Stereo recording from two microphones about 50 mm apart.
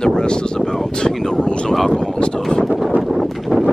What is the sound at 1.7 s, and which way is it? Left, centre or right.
Speech, centre.